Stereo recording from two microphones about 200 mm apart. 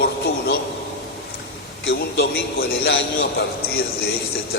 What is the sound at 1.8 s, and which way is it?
A man's voice, 55° left (ahead or behind).